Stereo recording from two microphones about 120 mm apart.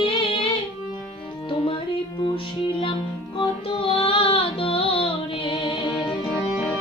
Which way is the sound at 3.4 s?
50° left (ahead or behind).